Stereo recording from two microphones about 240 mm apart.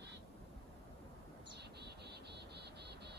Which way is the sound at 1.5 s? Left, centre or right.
Right.